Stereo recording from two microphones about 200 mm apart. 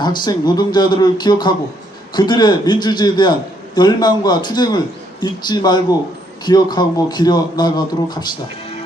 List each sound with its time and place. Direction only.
0.0 s a man's voice: 20° left (ahead or behind)